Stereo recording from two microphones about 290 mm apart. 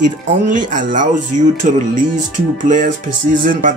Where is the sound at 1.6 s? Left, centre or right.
Right.